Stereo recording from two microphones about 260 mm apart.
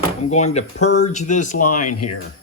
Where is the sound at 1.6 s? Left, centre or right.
Left.